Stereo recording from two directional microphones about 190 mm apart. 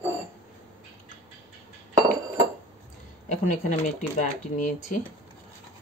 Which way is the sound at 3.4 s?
40° left (ahead or behind).